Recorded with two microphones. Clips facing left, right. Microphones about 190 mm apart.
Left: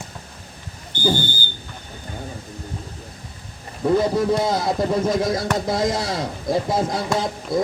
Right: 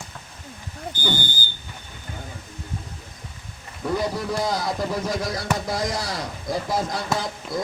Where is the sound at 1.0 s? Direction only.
30° left (ahead or behind).